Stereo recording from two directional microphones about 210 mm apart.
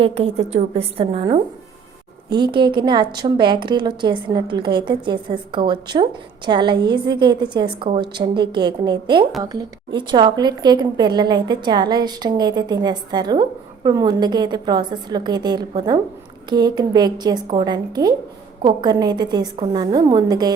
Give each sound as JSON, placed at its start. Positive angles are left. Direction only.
{"t": 0.0, "sound": "a woman's voice", "side_deg": -30}